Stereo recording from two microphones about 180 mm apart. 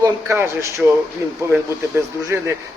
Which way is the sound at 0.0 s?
15° right (ahead or behind).